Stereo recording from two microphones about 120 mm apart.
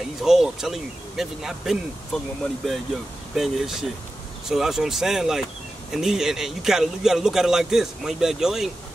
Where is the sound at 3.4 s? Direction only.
5° right (ahead or behind).